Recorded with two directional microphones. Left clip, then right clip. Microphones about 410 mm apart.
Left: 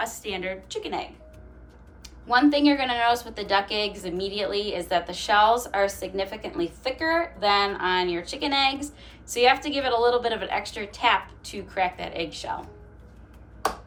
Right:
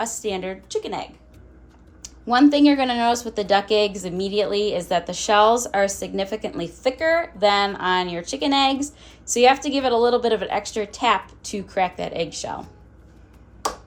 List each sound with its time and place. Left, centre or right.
0.0 s speech: centre